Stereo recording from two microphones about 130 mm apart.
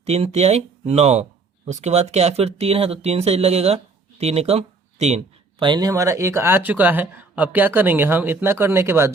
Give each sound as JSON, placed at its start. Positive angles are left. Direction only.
{"t": 0.0, "sound": "speech", "side_deg": -50}
{"t": 5.5, "sound": "speech", "side_deg": -35}